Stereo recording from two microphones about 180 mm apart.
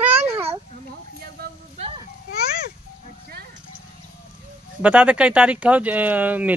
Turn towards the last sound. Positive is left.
turn(degrees=-10)  # may be behind; listen again after turning